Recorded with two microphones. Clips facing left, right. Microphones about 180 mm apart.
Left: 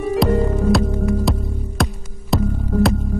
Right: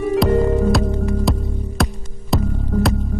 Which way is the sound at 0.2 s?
Centre (ahead or behind).